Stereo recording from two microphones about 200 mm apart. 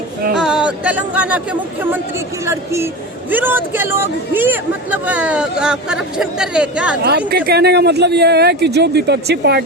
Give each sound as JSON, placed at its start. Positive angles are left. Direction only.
{"t": 0.3, "sound": "speech", "side_deg": -5}
{"t": 2.5, "sound": "speech", "side_deg": -15}
{"t": 7.3, "sound": "speech", "side_deg": -55}